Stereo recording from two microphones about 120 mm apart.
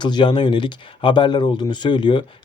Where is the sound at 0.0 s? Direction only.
40° left (ahead or behind).